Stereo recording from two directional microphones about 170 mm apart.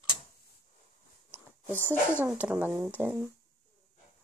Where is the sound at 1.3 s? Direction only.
10° left (ahead or behind).